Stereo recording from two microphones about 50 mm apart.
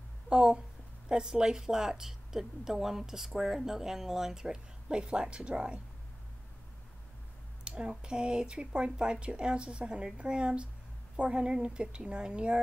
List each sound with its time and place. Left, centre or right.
0.3 s speech: centre
7.6 s speech: centre